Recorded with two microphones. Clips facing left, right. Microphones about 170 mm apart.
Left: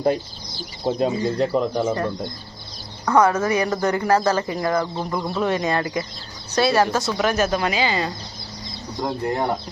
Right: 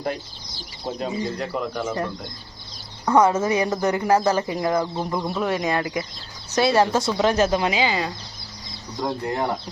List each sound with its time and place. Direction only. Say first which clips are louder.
0.9 s speech: left 6 dB; 35° left (ahead or behind)
3.1 s speech: even; 20° right (ahead or behind)
5.4 s speech: left 3 dB; 5° right (ahead or behind)
9.0 s speech: left 1 dB; 15° left (ahead or behind)